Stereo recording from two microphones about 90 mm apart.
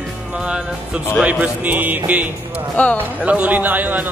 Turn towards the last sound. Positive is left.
turn(degrees=-20)  # may be behind; listen again after turning